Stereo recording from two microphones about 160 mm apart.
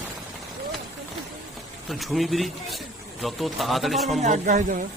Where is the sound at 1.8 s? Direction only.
Centre (ahead or behind).